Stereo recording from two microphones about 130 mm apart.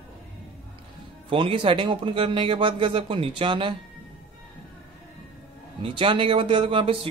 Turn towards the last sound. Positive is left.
turn(degrees=-45)  # may be behind; listen again after turning